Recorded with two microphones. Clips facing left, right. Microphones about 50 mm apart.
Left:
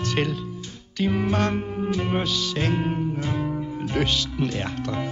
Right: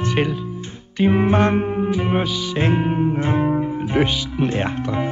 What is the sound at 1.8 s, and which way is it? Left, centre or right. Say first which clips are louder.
Music: right 4 dB; centre.